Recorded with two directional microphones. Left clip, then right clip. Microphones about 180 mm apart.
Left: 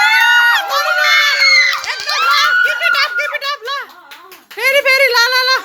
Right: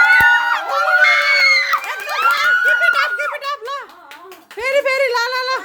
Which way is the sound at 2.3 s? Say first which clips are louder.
Left 2 dB; 10° right (ahead or behind).